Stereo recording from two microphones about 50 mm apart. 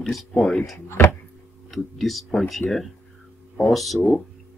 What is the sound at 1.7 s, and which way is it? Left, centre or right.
Speech, centre.